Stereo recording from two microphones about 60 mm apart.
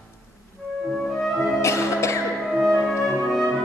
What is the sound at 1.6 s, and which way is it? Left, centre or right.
Music, left.